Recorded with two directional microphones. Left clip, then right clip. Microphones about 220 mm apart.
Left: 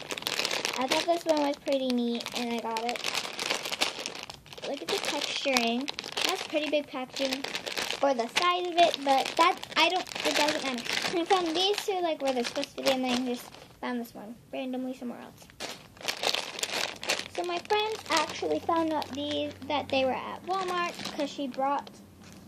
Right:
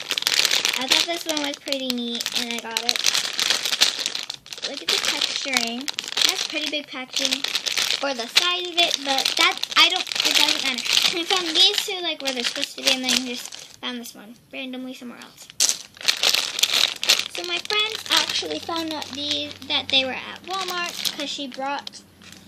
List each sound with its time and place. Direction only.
0.2 s shuffling cards: 15° right (ahead or behind)
1.3 s a child's voice: 15° right (ahead or behind)
3.1 s crumpling: 20° right (ahead or behind)
5.5 s a child's voice: 15° right (ahead or behind)
7.2 s a child's voice: 10° right (ahead or behind)
16.0 s crumpling: 15° right (ahead or behind)
17.1 s a child's voice: 15° right (ahead or behind)